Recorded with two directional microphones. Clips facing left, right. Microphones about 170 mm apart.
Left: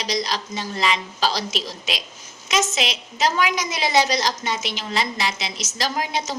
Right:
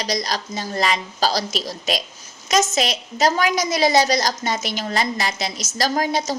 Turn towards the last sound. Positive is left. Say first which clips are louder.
# right 4 dB
turn(degrees=-40)  # may be behind; listen again after turning